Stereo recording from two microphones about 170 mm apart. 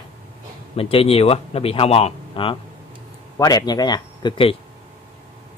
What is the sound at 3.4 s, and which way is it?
Speech, 20° left (ahead or behind).